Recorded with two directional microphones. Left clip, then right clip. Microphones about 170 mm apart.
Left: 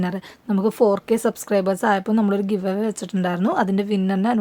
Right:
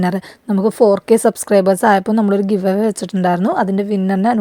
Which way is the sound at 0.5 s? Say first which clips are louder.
Right 6 dB; 25° right (ahead or behind).